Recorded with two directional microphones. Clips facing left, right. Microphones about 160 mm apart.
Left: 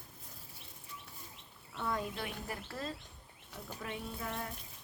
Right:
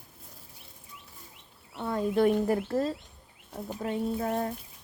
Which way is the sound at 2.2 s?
45° right (ahead or behind).